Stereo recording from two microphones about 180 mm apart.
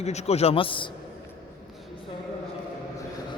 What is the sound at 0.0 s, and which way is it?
Speech, 35° left (ahead or behind).